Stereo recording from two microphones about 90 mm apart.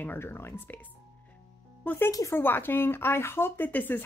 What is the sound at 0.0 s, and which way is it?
Speech, 25° left (ahead or behind).